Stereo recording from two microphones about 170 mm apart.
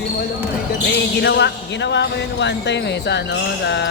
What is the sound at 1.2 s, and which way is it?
Speech, 85° left.